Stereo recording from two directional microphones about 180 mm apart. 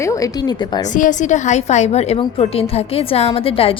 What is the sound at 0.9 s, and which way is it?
A woman's voice, 45° left (ahead or behind).